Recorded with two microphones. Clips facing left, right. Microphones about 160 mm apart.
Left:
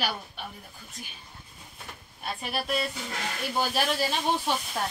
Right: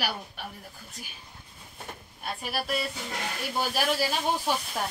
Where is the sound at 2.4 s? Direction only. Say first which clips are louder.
Left 1 dB; 5° right (ahead or behind).